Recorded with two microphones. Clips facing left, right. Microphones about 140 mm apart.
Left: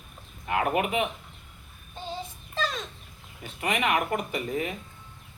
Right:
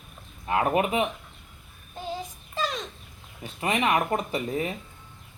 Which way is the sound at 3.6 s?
30° right (ahead or behind).